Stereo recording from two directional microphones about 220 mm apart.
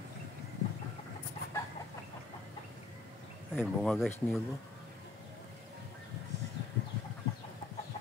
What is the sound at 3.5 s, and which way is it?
Speech, centre (ahead or behind).